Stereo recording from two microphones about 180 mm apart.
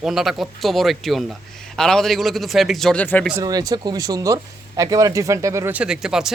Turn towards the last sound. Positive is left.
turn(degrees=-5)  # may be behind; listen again after turning